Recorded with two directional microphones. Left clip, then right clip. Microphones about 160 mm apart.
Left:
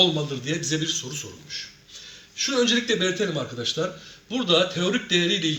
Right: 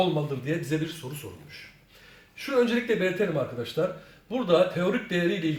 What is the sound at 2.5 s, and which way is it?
A man's voice, 40° right (ahead or behind).